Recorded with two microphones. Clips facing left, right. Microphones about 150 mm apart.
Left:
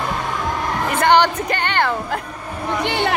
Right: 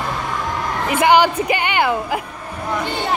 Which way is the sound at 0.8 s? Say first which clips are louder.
Right 1 dB; 10° right (ahead or behind).